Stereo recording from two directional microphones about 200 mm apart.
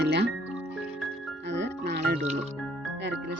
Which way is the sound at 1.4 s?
60° right (ahead or behind).